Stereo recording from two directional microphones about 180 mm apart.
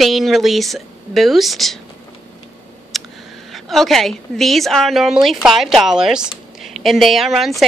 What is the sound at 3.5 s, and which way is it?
Speech, centre (ahead or behind).